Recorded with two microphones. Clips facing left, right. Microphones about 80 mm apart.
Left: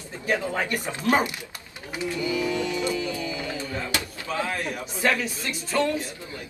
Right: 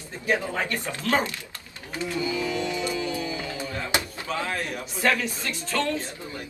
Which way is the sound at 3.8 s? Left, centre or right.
Right.